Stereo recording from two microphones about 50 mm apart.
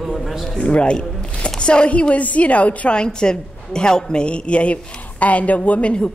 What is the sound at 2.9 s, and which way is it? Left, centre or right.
A woman's voice, centre.